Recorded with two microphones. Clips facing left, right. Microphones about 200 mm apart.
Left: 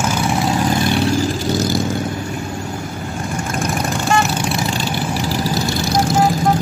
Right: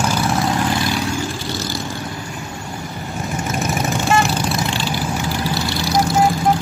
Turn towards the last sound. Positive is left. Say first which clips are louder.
# left 2 dB
turn(degrees=45)  # may be behind; listen again after turning